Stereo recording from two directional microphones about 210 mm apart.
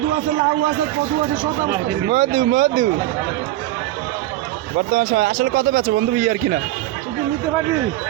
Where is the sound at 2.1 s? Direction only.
40° right (ahead or behind).